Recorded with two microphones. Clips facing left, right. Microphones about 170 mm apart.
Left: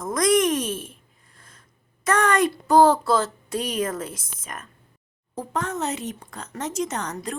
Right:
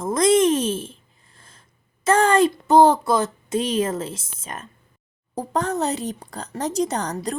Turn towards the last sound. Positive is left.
turn(degrees=-35)  # may be behind; listen again after turning